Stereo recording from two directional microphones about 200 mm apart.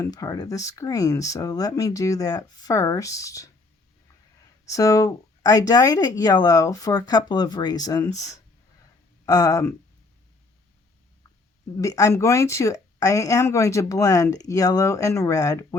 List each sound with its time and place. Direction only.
0.0 s speech: 15° left (ahead or behind)
4.6 s speech: 15° left (ahead or behind)
9.2 s speech: 20° left (ahead or behind)
11.8 s speech: 15° left (ahead or behind)